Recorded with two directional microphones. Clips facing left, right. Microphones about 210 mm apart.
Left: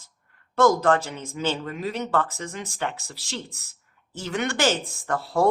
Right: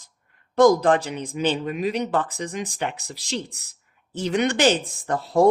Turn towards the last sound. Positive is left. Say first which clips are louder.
# right 4 dB
turn(degrees=-20)  # may be behind; listen again after turning